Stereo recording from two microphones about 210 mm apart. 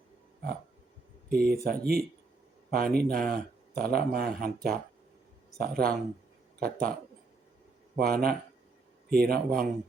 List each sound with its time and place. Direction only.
1.3 s speech: 45° right (ahead or behind)
7.9 s speech: 45° right (ahead or behind)